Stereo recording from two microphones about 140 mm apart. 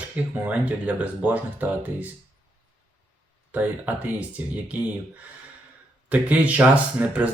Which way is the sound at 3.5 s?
10° right (ahead or behind).